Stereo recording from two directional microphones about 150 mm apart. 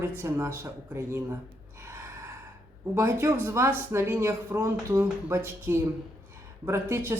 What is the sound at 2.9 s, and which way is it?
Speech, 15° right (ahead or behind).